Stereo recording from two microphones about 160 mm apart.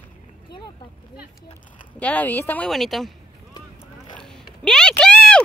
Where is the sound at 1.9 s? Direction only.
10° left (ahead or behind).